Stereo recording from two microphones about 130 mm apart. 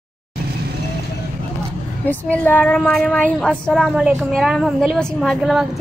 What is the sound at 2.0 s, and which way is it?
A woman's voice, 15° left (ahead or behind).